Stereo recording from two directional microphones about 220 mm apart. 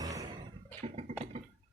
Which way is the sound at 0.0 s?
15° right (ahead or behind).